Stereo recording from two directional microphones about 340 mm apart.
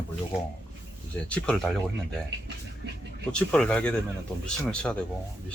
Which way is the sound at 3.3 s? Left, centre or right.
Centre.